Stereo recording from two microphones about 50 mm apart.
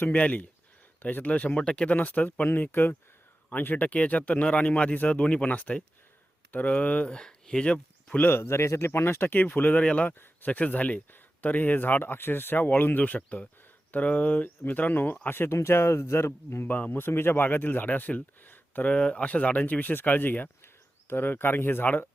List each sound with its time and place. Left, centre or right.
0.0 s a man's voice: left
1.9 s speech: left
2.6 s a man's voice: left
7.1 s speech: centre
8.2 s a man's voice: left
13.0 s a man's voice: left
15.4 s speech: left
16.6 s speech: left
18.9 s speech: left